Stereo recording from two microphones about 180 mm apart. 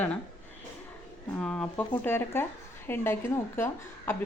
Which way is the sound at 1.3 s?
5° left (ahead or behind).